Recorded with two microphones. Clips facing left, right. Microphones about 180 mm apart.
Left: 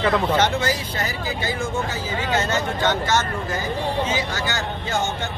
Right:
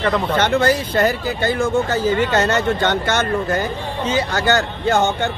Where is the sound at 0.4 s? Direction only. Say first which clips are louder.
Right 5 dB; 60° right (ahead or behind).